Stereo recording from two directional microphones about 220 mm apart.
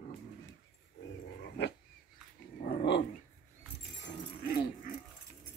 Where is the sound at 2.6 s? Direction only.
50° left (ahead or behind).